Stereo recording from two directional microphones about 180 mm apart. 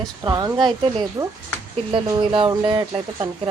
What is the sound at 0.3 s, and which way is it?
Speech, 20° right (ahead or behind).